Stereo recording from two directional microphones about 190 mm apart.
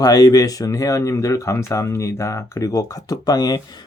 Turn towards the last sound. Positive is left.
turn(degrees=20)  # may be behind; listen again after turning